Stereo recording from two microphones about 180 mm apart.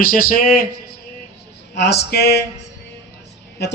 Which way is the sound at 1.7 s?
65° left (ahead or behind).